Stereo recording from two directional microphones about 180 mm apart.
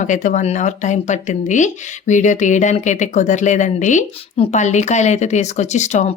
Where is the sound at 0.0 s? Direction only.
45° left (ahead or behind).